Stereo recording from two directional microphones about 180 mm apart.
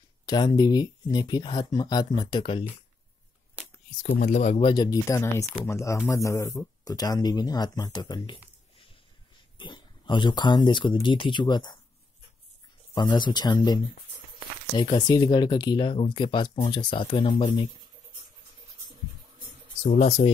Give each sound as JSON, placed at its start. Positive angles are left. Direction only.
{"t": 0.3, "sound": "speech", "side_deg": 20}
{"t": 4.0, "sound": "speech", "side_deg": 40}
{"t": 9.6, "sound": "speech", "side_deg": 25}
{"t": 12.9, "sound": "speech", "side_deg": 25}
{"t": 19.9, "sound": "speech", "side_deg": 45}